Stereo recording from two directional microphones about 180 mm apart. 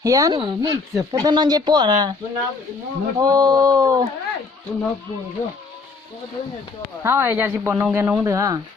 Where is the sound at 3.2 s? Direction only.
20° right (ahead or behind).